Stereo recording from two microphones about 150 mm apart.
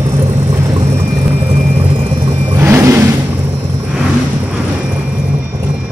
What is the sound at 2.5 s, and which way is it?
Vehicle, 15° right (ahead or behind).